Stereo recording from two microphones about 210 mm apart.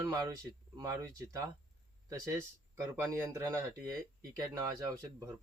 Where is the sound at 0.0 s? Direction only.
15° right (ahead or behind).